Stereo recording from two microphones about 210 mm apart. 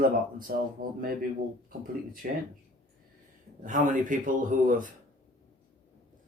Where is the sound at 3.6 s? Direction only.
40° right (ahead or behind).